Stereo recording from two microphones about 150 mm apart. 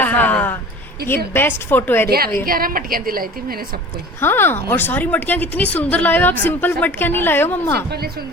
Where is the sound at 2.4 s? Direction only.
75° right (ahead or behind).